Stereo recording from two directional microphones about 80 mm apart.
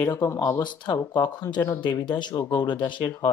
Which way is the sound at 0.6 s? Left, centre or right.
Left.